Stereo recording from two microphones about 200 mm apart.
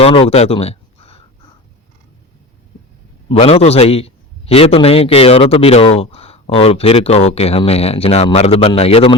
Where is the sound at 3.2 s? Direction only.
30° left (ahead or behind).